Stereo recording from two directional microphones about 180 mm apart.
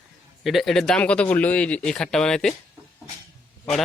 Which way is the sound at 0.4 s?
Centre (ahead or behind).